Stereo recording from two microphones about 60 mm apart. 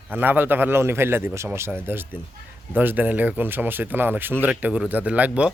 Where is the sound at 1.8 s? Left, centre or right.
Right.